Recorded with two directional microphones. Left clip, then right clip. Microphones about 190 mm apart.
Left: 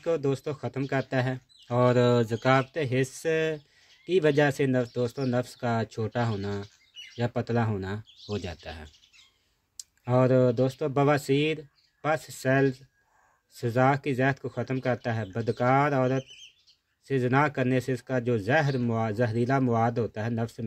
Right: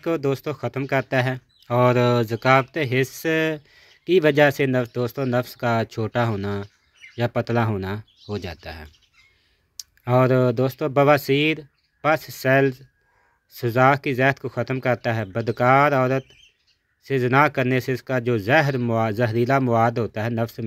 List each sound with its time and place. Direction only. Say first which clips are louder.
0.0 s speech: right 4 dB; 20° right (ahead or behind)
8.3 s speech: right 4 dB; 5° right (ahead or behind)
10.0 s speech: right 4 dB; 20° right (ahead or behind)